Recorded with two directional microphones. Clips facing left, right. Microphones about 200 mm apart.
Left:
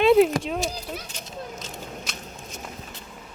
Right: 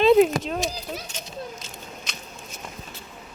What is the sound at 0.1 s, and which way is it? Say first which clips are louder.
Speech: right 1 dB; 5° left (ahead or behind).